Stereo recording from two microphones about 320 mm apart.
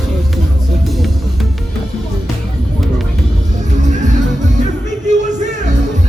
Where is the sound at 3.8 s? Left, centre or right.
Right.